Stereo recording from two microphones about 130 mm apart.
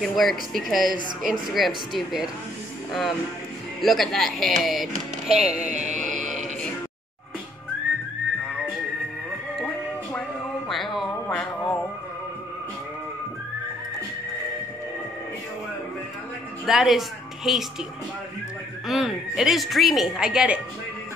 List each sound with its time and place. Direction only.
0.0 s speech: centre (ahead or behind)
5.6 s music: 70° right (ahead or behind)
5.9 s mantra: centre (ahead or behind)
10.7 s a sound: centre (ahead or behind)
11.2 s music: 10° left (ahead or behind)
16.6 s music: 5° right (ahead or behind)
17.5 s speech: 5° right (ahead or behind)
18.9 s speech: 5° right (ahead or behind)